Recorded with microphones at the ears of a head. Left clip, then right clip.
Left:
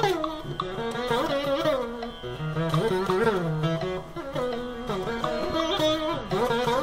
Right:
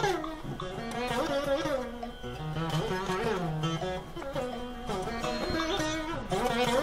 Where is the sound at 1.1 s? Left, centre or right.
Left.